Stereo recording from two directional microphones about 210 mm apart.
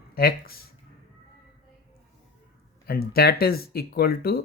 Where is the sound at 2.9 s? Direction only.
45° left (ahead or behind).